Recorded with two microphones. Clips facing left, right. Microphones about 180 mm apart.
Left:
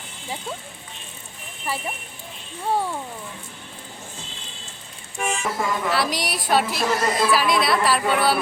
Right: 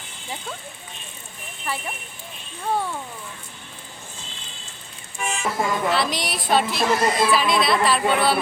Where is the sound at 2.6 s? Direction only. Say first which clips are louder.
Left 1 dB; 10° left (ahead or behind).